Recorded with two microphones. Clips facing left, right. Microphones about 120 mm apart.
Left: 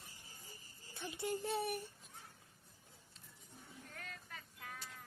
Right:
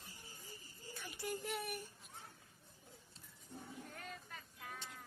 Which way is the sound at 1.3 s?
30° left (ahead or behind).